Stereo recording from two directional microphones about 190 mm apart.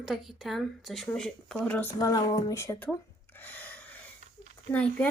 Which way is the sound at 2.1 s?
20° left (ahead or behind).